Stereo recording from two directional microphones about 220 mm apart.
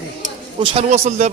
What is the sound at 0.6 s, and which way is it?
Speech, 25° right (ahead or behind).